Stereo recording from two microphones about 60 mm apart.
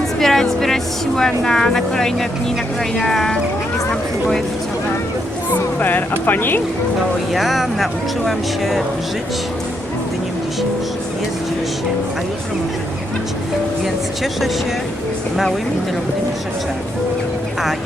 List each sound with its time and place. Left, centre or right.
0.2 s speech: centre
5.5 s speech: left
7.3 s speech: centre